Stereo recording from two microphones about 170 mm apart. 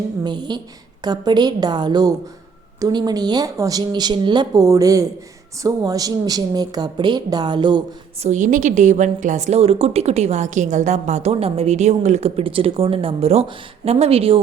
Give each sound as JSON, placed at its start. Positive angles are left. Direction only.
{"t": 0.3, "sound": "speech", "side_deg": -25}
{"t": 8.2, "sound": "a woman's voice", "side_deg": -45}